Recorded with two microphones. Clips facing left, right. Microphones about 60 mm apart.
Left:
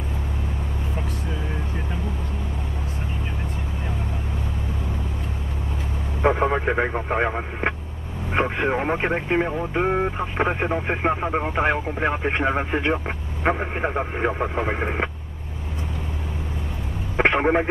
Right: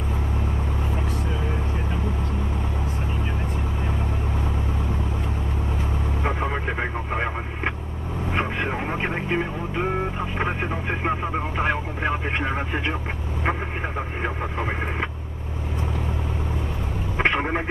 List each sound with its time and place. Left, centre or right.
6.2 s radio: left
10.3 s speech: left
17.3 s speech: left